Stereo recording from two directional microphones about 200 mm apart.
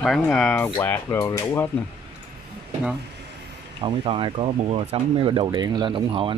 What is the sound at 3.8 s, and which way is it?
Speech, 25° right (ahead or behind).